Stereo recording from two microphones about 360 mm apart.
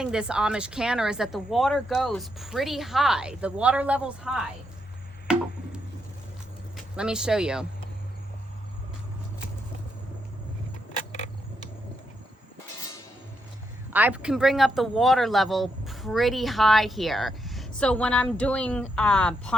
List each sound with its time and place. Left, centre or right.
0.0 s speech: centre
5.3 s music: centre
6.9 s speech: centre
13.9 s speech: centre